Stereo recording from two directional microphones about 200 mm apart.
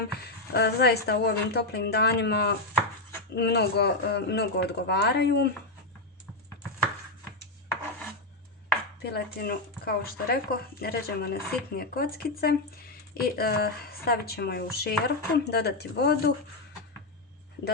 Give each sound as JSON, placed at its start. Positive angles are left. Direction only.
{"t": 0.5, "sound": "speech", "side_deg": 55}
{"t": 9.0, "sound": "speech", "side_deg": 55}